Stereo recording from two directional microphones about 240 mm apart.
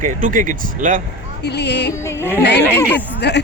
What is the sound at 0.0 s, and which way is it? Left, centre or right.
A man's voice, right.